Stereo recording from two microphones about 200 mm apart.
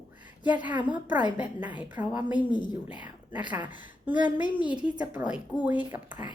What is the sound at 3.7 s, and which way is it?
A woman's voice, 10° right (ahead or behind).